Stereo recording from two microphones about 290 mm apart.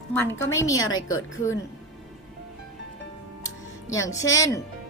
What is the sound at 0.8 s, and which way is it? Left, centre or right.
Speech, left.